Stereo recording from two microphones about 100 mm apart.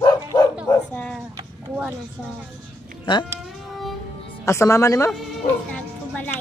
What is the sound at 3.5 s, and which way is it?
Music, centre (ahead or behind).